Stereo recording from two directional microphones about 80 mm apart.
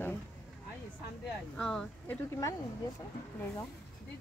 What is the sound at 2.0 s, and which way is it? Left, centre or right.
Speech, left.